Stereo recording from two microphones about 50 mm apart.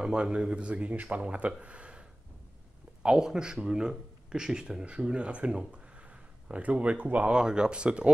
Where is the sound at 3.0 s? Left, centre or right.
Centre.